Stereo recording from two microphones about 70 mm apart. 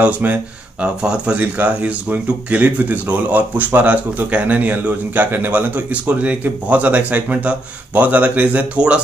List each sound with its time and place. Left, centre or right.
0.0 s speech: right